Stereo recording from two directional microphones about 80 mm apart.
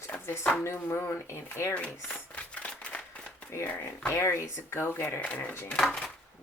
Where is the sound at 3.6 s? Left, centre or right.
Left.